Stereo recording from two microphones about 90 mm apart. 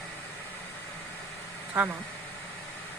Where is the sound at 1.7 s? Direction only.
20° right (ahead or behind).